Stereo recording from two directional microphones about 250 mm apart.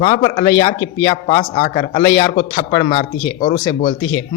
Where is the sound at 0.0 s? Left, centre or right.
Left.